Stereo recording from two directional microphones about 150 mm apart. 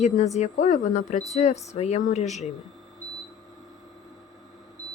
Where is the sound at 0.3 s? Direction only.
50° left (ahead or behind).